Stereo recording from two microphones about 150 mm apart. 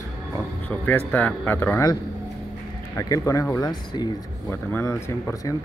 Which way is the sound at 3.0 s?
20° left (ahead or behind).